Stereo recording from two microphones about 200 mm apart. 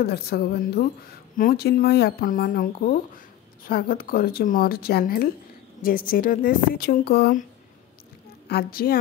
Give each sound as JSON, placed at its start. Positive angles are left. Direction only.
{"t": 0.0, "sound": "speech", "side_deg": 50}
{"t": 8.5, "sound": "speech", "side_deg": 50}